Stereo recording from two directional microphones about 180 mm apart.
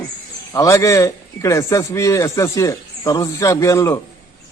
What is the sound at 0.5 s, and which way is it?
A man's voice, 20° left (ahead or behind).